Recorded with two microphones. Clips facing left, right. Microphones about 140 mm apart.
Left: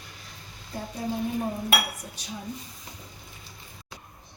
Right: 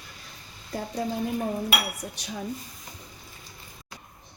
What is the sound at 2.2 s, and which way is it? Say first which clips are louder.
Speech: right 2 dB; 70° right (ahead or behind).